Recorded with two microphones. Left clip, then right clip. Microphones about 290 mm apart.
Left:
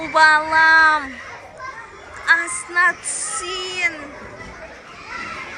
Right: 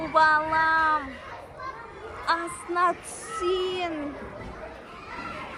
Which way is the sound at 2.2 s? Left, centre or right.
Centre.